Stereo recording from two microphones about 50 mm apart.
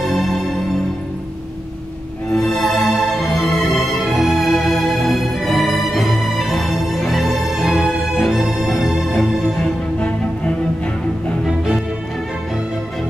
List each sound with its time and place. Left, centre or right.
0.1 s music: centre
2.6 s music: centre
9.9 s music: left
11.4 s music: centre